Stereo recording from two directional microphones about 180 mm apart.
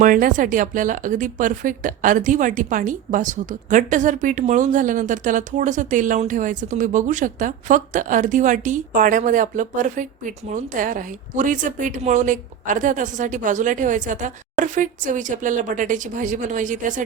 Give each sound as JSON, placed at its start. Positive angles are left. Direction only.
{"t": 0.0, "sound": "speech", "side_deg": -50}